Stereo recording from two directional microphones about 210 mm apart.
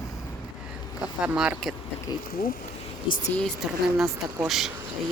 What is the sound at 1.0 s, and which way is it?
Speech, 5° right (ahead or behind).